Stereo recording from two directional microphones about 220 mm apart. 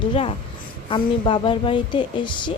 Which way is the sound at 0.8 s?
25° left (ahead or behind).